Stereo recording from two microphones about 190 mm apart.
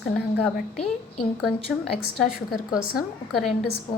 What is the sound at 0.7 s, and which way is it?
Speech, 30° left (ahead or behind).